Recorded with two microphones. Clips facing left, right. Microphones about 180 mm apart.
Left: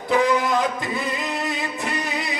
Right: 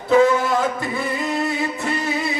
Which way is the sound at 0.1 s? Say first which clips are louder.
Right 4 dB; 15° left (ahead or behind).